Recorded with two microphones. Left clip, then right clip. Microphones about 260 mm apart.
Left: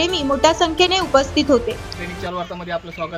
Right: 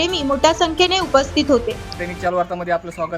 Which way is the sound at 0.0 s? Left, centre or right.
Centre.